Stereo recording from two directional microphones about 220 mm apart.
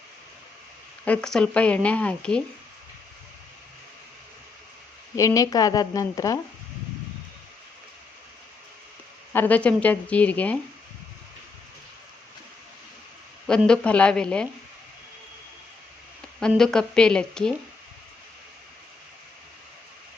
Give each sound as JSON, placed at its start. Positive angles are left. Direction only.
{"t": 1.0, "sound": "speech", "side_deg": 5}
{"t": 5.1, "sound": "a woman's voice", "side_deg": 15}
{"t": 9.3, "sound": "a woman's voice", "side_deg": 10}
{"t": 13.5, "sound": "speech", "side_deg": 5}
{"t": 16.5, "sound": "speech", "side_deg": 5}